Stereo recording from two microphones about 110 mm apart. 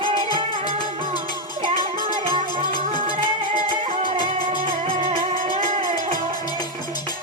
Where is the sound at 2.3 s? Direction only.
50° right (ahead or behind).